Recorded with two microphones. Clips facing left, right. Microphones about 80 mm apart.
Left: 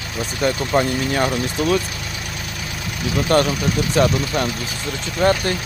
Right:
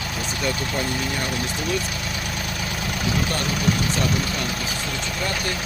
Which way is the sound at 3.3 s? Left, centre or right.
Left.